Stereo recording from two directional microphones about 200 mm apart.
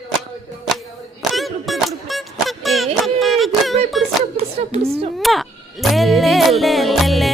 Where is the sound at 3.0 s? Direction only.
Centre (ahead or behind).